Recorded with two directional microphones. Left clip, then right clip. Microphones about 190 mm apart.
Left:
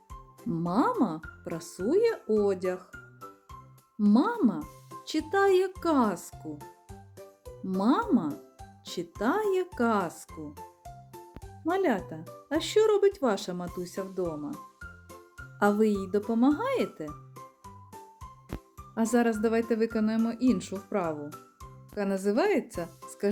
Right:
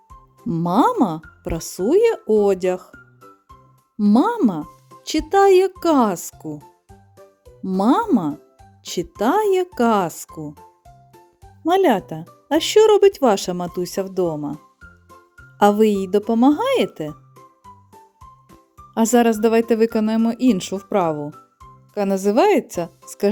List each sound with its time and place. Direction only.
0.5 s speech: 40° right (ahead or behind)
3.9 s speech: 40° right (ahead or behind)
7.6 s speech: 40° right (ahead or behind)
11.6 s speech: 45° right (ahead or behind)
15.5 s speech: 40° right (ahead or behind)
17.3 s music: centre (ahead or behind)
18.9 s speech: 45° right (ahead or behind)